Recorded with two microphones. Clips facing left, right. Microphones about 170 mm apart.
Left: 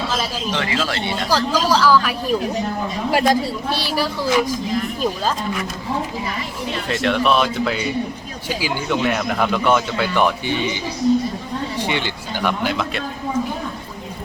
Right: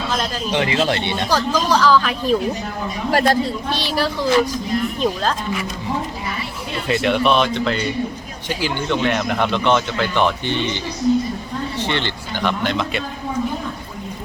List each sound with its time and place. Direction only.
0.5 s speech: 20° right (ahead or behind)
1.5 s speech: 10° left (ahead or behind)
6.8 s speech: centre (ahead or behind)
11.8 s speech: 10° left (ahead or behind)